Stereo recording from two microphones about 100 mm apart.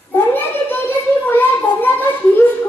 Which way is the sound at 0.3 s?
20° left (ahead or behind).